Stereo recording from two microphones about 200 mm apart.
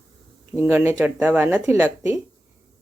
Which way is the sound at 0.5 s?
10° right (ahead or behind).